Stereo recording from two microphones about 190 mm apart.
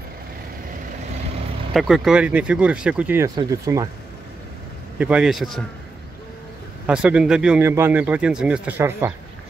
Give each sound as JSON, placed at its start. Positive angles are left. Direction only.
{"t": 1.7, "sound": "speech", "side_deg": 0}
{"t": 4.9, "sound": "speech", "side_deg": -5}
{"t": 6.9, "sound": "speech", "side_deg": -5}